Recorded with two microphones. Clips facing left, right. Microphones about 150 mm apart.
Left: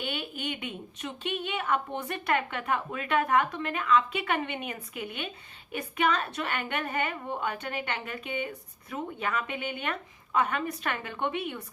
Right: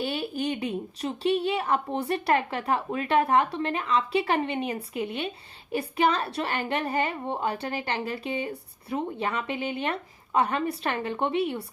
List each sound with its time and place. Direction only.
0.0 s a woman's voice: 35° right (ahead or behind)